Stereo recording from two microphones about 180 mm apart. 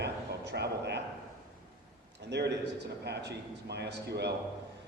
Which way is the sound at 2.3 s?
70° right (ahead or behind).